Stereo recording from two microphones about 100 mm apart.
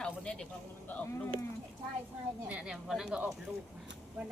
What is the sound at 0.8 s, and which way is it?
Speech, 20° left (ahead or behind).